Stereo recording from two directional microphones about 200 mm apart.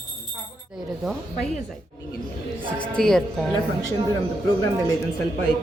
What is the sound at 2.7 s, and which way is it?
Speech, 5° left (ahead or behind).